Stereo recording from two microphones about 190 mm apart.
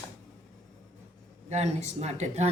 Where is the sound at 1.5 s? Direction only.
35° right (ahead or behind).